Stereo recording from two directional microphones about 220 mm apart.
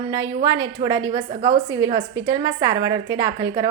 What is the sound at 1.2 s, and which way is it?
A woman's voice, 20° right (ahead or behind).